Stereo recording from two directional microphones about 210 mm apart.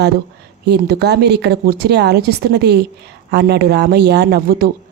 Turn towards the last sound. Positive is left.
turn(degrees=-45)  # may be behind; listen again after turning